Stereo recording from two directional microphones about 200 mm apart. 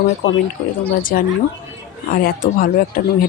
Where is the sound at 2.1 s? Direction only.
45° left (ahead or behind).